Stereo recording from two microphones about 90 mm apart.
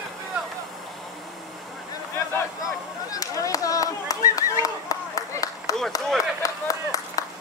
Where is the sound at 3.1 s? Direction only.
40° left (ahead or behind).